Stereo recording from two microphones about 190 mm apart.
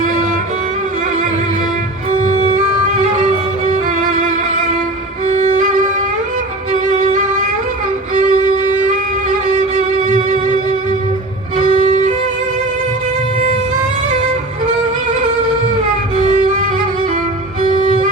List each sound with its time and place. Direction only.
0.0 s music: 40° right (ahead or behind)
2.2 s music: 35° right (ahead or behind)
5.2 s violin: 40° right (ahead or behind)
8.1 s music: 40° right (ahead or behind)
11.5 s violin: 40° right (ahead or behind)
16.1 s music: 40° right (ahead or behind)